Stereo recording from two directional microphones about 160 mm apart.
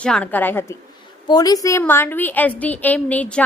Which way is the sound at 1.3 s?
25° left (ahead or behind).